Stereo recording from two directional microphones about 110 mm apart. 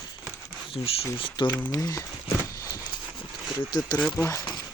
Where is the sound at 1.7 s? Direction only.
30° left (ahead or behind).